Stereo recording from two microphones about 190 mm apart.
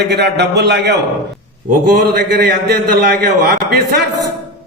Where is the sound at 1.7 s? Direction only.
50° right (ahead or behind).